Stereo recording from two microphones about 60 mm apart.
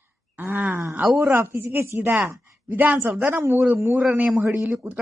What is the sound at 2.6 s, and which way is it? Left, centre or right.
Speech, right.